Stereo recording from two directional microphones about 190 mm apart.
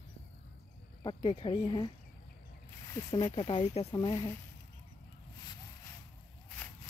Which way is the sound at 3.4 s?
35° left (ahead or behind).